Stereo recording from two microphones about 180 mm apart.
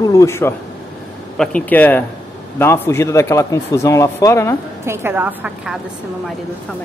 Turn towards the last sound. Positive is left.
turn(degrees=-5)  # may be behind; listen again after turning